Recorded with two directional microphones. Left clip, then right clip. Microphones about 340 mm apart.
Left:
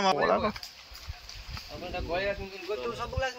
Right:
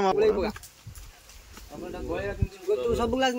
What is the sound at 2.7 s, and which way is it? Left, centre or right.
Speech, right.